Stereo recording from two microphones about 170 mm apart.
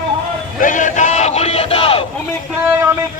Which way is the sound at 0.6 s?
50° left (ahead or behind).